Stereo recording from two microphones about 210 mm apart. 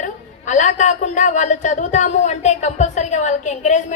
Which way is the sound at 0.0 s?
35° left (ahead or behind).